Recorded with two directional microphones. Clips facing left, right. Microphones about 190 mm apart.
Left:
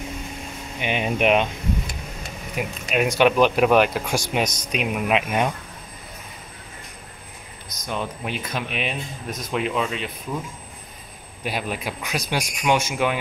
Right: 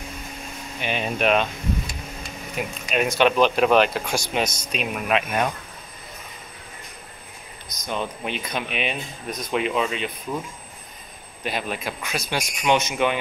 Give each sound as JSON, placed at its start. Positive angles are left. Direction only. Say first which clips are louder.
{"t": 0.7, "sound": "speech", "louder": "left 2 dB", "side_deg": 15}
{"t": 7.8, "sound": "speech", "louder": "even", "side_deg": 5}
{"t": 11.4, "sound": "speech", "louder": "even", "side_deg": 10}